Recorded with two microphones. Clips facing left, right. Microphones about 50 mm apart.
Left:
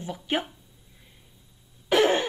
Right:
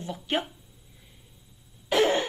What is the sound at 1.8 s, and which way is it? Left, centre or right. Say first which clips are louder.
Throat clearing: left 2 dB; left.